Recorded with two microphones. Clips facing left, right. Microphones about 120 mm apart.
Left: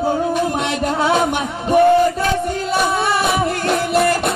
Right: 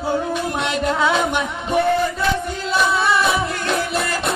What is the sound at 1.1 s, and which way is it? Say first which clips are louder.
Music: left 3 dB; 50° left (ahead or behind).